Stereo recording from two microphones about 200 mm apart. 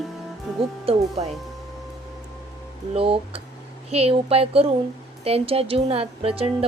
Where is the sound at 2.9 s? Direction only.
30° right (ahead or behind).